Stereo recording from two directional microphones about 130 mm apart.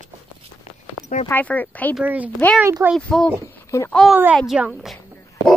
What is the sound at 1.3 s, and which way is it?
Speech, 15° left (ahead or behind).